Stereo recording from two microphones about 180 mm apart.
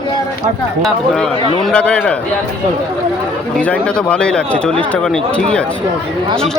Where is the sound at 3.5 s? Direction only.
5° left (ahead or behind).